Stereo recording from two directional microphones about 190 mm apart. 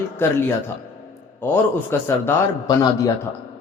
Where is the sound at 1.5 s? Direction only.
10° left (ahead or behind).